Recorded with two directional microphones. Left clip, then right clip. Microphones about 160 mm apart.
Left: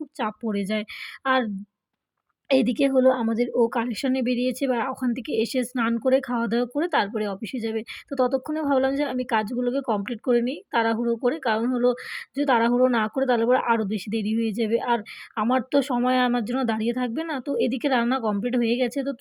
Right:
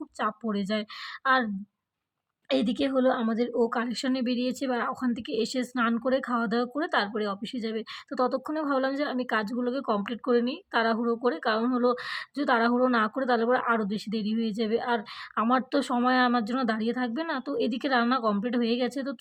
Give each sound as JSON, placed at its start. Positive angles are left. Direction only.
{"t": 0.2, "sound": "speech", "side_deg": 15}
{"t": 2.5, "sound": "speech", "side_deg": 15}